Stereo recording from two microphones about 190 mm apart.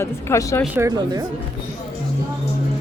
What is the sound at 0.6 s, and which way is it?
Speech, 10° right (ahead or behind).